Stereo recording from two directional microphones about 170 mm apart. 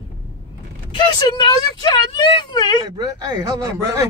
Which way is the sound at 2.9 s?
25° right (ahead or behind).